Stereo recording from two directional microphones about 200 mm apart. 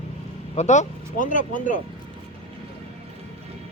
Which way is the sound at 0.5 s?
35° left (ahead or behind).